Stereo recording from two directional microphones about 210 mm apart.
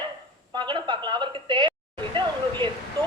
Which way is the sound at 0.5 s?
20° right (ahead or behind).